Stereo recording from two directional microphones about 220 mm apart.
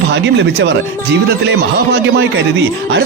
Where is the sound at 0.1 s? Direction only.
55° right (ahead or behind).